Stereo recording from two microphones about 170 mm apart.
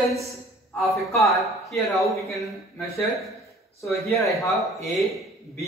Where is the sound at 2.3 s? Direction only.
15° left (ahead or behind).